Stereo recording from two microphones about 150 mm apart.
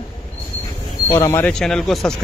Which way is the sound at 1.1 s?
15° left (ahead or behind).